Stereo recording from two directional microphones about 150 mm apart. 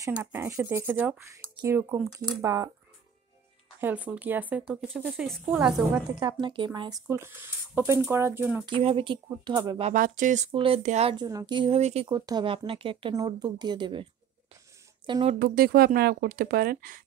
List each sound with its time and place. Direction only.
0.2 s speech: 15° right (ahead or behind)
3.8 s a woman's voice: 10° right (ahead or behind)
6.4 s speech: 30° right (ahead or behind)
7.1 s speech: 15° right (ahead or behind)
8.6 s speech: 35° right (ahead or behind)
9.9 s speech: 65° right (ahead or behind)
10.5 s speech: 35° right (ahead or behind)
10.8 s speech: 55° right (ahead or behind)
11.1 s speech: 25° right (ahead or behind); by 12.1 s 40° right (ahead or behind)
12.1 s speech: 30° right (ahead or behind)
13.1 s speech: 25° right (ahead or behind)
15.3 s speech: 75° right (ahead or behind)